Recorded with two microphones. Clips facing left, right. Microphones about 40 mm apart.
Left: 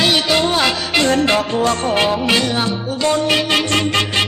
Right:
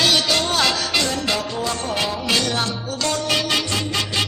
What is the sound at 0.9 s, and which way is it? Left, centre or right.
Music, left.